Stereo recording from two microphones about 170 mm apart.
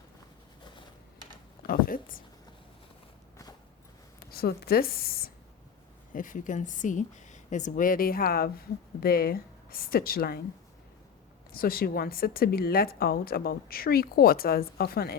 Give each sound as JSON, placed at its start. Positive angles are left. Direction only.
{"t": 1.6, "sound": "a sound", "side_deg": 55}
{"t": 4.3, "sound": "speech", "side_deg": 65}
{"t": 6.1, "sound": "speech", "side_deg": 50}
{"t": 11.5, "sound": "speech", "side_deg": 60}